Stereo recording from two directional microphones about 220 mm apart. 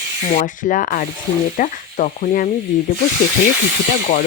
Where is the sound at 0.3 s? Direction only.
35° left (ahead or behind).